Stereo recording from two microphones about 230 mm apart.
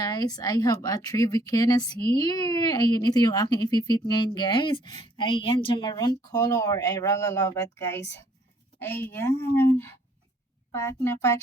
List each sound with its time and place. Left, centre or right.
0.0 s a woman's voice: centre